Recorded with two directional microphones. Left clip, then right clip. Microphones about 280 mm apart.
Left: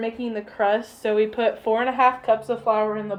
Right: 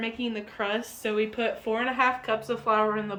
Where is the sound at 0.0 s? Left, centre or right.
Centre.